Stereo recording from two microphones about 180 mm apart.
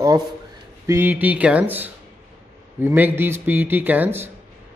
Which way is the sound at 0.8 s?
10° right (ahead or behind).